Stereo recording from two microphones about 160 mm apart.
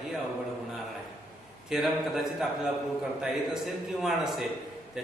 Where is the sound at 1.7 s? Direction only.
Centre (ahead or behind).